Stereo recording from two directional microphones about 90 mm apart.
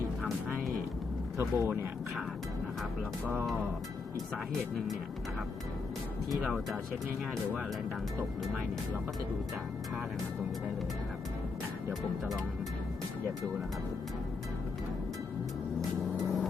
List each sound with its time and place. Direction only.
0.2 s music: centre (ahead or behind)
1.4 s speech: 25° right (ahead or behind)
6.3 s speech: centre (ahead or behind)